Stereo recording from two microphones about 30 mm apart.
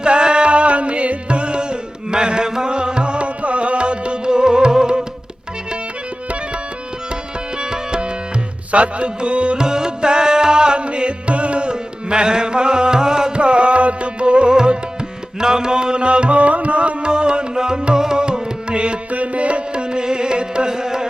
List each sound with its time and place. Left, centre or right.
0.0 s music: right
7.6 s tabla: right
8.7 s music: right
9.6 s music: right
11.7 s music: right
13.3 s music: right
14.5 s music: right
17.1 s music: right
19.1 s music: right
19.7 s carnatic music: right